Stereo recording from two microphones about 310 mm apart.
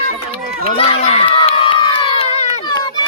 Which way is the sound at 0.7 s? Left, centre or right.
Centre.